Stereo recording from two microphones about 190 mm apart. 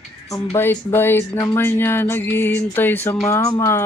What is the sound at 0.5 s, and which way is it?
Speech, 10° left (ahead or behind).